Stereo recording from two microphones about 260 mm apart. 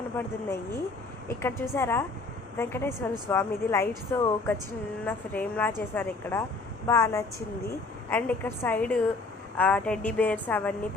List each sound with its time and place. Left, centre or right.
0.2 s a woman's voice: centre